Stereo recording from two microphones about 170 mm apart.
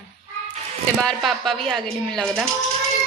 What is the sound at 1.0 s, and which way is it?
A woman's voice, centre (ahead or behind).